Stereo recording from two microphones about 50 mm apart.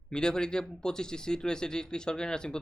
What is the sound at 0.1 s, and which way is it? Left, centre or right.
Speech, centre.